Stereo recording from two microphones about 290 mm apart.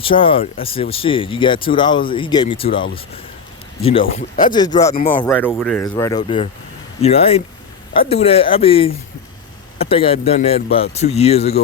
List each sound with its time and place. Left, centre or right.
0.0 s speech: centre